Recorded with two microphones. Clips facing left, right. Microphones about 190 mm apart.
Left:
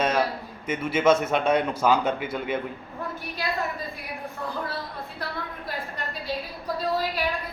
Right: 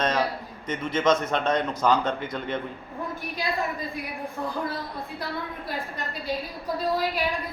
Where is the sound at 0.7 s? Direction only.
10° left (ahead or behind).